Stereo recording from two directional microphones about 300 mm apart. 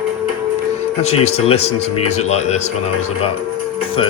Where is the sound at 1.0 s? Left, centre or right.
Left.